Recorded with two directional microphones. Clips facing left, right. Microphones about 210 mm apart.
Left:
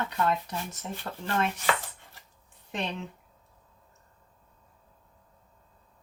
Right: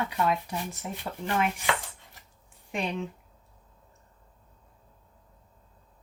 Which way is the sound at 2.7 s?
10° right (ahead or behind).